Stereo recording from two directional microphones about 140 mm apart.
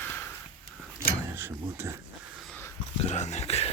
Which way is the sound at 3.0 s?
55° left (ahead or behind).